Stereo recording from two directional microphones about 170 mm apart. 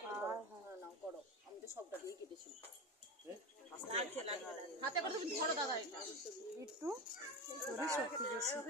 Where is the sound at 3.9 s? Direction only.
35° right (ahead or behind).